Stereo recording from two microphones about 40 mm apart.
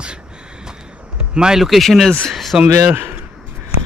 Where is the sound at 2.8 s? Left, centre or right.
Right.